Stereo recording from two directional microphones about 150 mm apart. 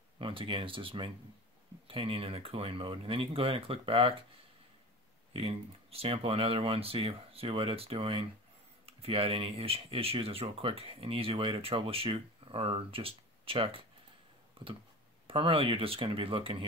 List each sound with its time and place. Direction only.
0.2 s speech: 35° right (ahead or behind)
5.3 s speech: 40° right (ahead or behind)
14.6 s a sound: 40° right (ahead or behind)
15.2 s speech: 35° right (ahead or behind)